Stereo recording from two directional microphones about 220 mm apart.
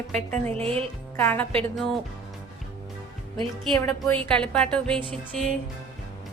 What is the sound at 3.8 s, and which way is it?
A woman's voice, 10° left (ahead or behind).